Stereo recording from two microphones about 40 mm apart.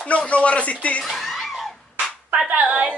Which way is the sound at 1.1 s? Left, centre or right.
Centre.